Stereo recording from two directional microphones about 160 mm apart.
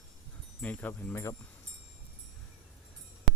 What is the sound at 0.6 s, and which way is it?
Speech, 10° left (ahead or behind).